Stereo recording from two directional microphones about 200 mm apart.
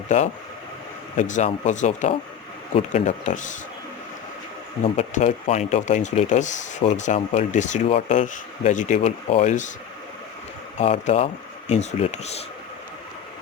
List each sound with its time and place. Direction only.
1.1 s speech: 35° left (ahead or behind)
4.9 s speech: 35° left (ahead or behind)
10.8 s speech: 35° left (ahead or behind)